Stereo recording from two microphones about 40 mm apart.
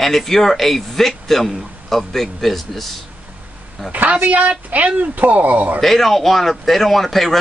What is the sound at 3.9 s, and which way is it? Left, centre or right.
A woman's voice, right.